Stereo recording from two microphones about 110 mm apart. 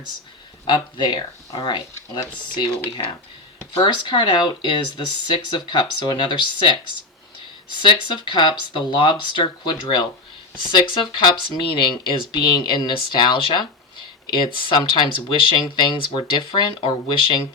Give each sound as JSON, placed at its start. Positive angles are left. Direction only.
{"t": 0.7, "sound": "speech", "side_deg": 45}
{"t": 3.8, "sound": "speech", "side_deg": 45}